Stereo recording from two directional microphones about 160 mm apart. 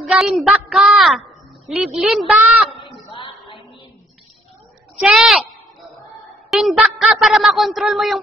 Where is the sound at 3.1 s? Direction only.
35° left (ahead or behind).